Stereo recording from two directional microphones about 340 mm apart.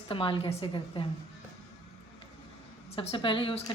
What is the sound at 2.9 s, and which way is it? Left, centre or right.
Speech, centre.